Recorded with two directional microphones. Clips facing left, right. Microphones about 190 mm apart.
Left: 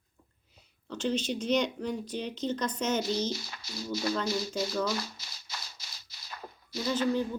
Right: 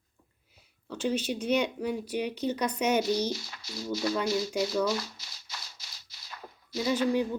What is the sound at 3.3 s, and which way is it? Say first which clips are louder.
Music: even; 40° left (ahead or behind).